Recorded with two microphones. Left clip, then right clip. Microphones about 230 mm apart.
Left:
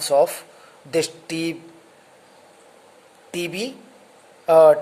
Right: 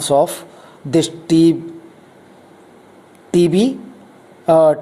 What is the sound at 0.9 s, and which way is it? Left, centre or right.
Speech, right.